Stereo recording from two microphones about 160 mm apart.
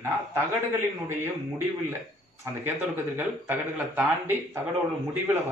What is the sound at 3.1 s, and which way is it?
Speech, 10° right (ahead or behind).